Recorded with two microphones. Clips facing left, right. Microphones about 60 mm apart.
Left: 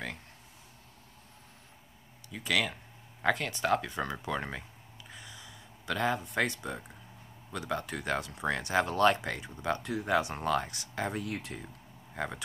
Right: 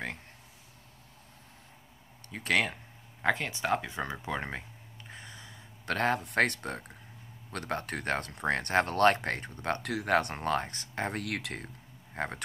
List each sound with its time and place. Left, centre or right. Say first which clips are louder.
2.6 s speech: right 1 dB; centre
5.1 s a sound: right 2 dB; right
5.9 s speech: right 2 dB; right
9.8 s speech: right 3 dB; right
10.3 s speech: even; right
11.1 s speech: right 1 dB; right
12.2 s speech: right 1 dB; right